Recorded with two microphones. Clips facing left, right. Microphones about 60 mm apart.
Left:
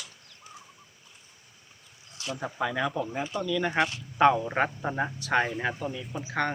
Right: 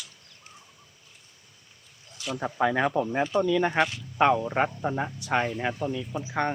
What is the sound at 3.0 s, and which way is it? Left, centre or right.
Speech, right.